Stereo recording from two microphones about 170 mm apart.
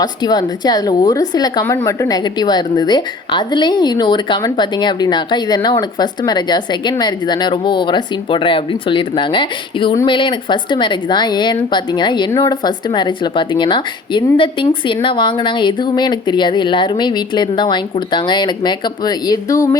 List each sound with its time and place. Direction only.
0.0 s a woman's voice: 25° left (ahead or behind)